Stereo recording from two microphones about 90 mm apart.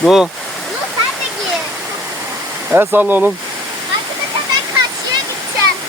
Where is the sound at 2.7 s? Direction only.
20° right (ahead or behind).